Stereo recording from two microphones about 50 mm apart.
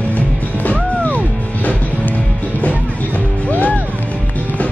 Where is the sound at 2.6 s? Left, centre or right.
Left.